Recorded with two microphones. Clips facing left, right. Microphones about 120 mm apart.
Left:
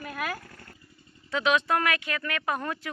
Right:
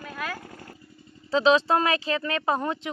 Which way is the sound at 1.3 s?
30° right (ahead or behind).